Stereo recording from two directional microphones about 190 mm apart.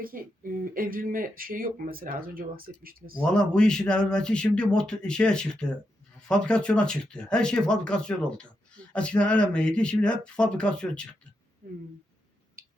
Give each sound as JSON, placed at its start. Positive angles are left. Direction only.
{"t": 0.0, "sound": "speech", "side_deg": -50}
{"t": 3.2, "sound": "speech", "side_deg": 5}
{"t": 11.6, "sound": "a sound", "side_deg": -45}